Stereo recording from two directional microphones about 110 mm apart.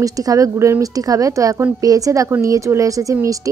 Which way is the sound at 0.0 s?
30° right (ahead or behind).